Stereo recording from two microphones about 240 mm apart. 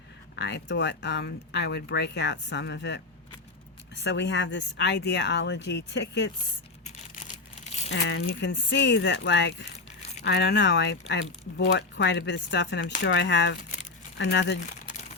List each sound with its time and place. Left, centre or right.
0.3 s speech: left
4.0 s speech: left
7.9 s speech: left